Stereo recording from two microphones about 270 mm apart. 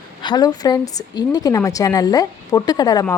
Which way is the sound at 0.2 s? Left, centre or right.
Centre.